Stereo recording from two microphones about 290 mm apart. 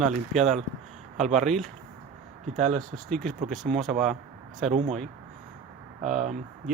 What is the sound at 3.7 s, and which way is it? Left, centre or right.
Speech, centre.